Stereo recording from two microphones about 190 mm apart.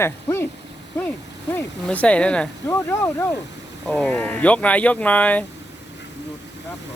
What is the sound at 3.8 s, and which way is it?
Speech, 5° left (ahead or behind).